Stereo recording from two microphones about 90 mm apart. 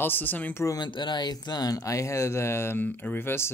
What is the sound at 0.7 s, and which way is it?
Speech, 55° left (ahead or behind).